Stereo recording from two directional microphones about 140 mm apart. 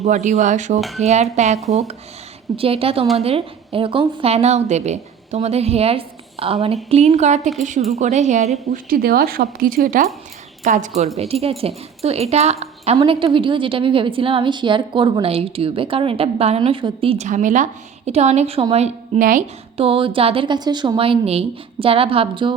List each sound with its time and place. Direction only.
0.0 s a woman's voice: 55° right (ahead or behind)
0.8 s speech: centre (ahead or behind)
1.0 s a woman's voice: 50° right (ahead or behind)
2.6 s a woman's voice: 45° right (ahead or behind)
8.7 s a woman's voice: 90° right
10.6 s a woman's voice: 60° right (ahead or behind)
11.2 s a woman's voice: 45° right (ahead or behind)
17.2 s a woman's voice: 65° right (ahead or behind)
19.2 s a woman's voice: 70° right (ahead or behind)
19.7 s a woman's voice: 40° right (ahead or behind)